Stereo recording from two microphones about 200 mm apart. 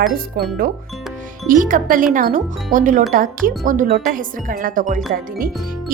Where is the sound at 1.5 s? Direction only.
40° right (ahead or behind).